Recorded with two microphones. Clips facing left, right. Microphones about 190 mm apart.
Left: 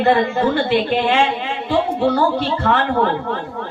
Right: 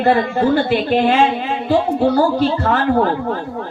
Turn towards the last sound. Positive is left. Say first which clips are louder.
# right 2 dB
turn(degrees=-40)  # may be behind; listen again after turning